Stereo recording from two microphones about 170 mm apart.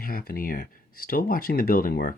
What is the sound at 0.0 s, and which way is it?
Speech, 60° left (ahead or behind).